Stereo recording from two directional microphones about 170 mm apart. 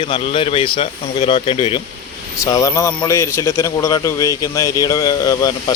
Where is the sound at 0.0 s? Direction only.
30° left (ahead or behind).